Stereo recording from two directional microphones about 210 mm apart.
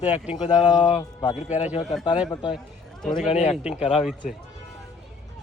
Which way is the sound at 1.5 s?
35° left (ahead or behind).